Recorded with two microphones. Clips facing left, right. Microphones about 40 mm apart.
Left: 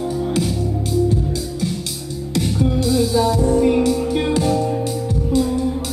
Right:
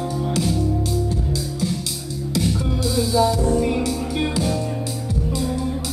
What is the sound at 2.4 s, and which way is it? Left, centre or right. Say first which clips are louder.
Music: left 7 dB; centre.